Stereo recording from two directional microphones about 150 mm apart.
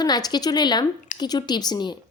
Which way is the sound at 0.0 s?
25° left (ahead or behind).